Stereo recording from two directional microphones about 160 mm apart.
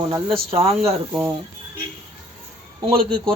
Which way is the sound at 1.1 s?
15° right (ahead or behind).